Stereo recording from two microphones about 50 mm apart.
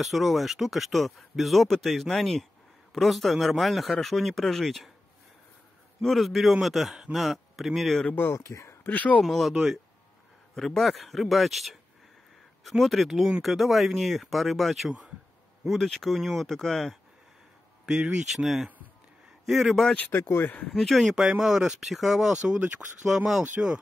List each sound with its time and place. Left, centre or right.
0.0 s speech: centre
6.0 s speech: centre
8.1 s speech: left
8.5 s speech: left
8.8 s speech: left
9.2 s speech: centre
9.5 s speech: centre
10.5 s speech: centre
17.8 s speech: centre